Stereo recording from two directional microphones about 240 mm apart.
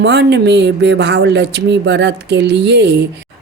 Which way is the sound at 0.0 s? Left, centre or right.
Right.